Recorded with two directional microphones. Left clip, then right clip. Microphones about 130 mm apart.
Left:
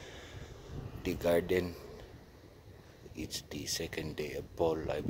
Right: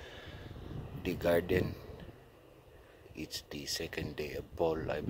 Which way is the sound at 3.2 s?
20° left (ahead or behind).